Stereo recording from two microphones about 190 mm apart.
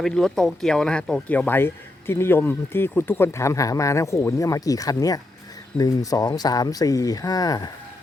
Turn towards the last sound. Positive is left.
turn(degrees=20)  # may be behind; listen again after turning